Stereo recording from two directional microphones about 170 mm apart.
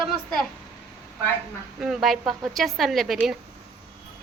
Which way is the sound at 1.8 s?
Centre (ahead or behind).